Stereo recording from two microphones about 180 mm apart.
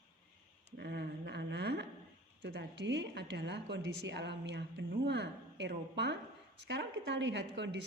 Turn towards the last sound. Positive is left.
turn(degrees=-80)